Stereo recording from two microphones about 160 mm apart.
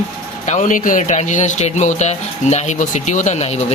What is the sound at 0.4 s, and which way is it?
Speech, 50° left (ahead or behind).